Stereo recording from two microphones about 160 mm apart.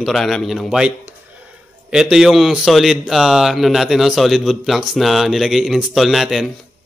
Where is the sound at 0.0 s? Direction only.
Centre (ahead or behind).